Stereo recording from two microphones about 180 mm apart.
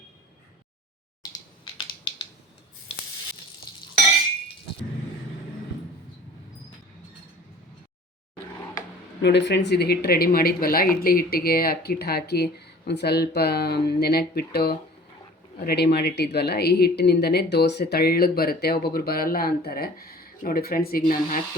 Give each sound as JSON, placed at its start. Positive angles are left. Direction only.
{"t": 9.2, "sound": "speech", "side_deg": 75}